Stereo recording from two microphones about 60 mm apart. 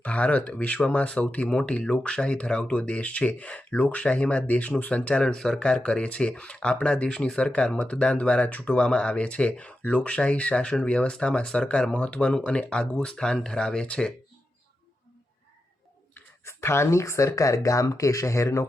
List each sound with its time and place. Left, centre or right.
0.0 s speech: left
16.4 s speech: left